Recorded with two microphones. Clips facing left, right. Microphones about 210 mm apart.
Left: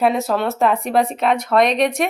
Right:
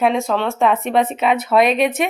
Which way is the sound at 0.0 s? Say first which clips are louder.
Even; centre (ahead or behind).